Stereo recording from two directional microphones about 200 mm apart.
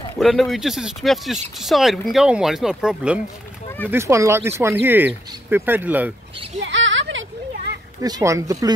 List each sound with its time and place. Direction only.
0.2 s speech: centre (ahead or behind)
6.6 s a sound: 65° right (ahead or behind)
8.0 s speech: 15° right (ahead or behind)